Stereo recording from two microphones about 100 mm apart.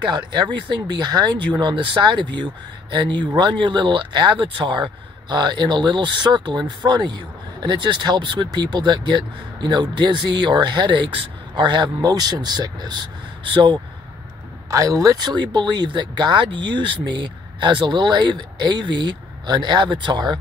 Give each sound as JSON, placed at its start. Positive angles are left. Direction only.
{"t": 0.0, "sound": "speech", "side_deg": -45}
{"t": 14.7, "sound": "speech", "side_deg": -35}
{"t": 15.2, "sound": "speech", "side_deg": -50}